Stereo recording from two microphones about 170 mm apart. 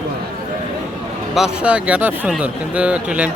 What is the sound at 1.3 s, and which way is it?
Speech, 5° right (ahead or behind).